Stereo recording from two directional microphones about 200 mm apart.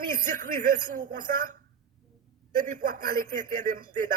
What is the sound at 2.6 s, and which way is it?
A man's voice, 40° right (ahead or behind).